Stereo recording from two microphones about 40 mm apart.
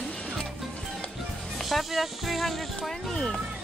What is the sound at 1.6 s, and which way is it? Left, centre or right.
Speech, centre.